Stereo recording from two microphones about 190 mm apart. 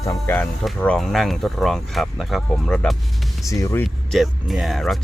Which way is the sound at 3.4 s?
15° left (ahead or behind).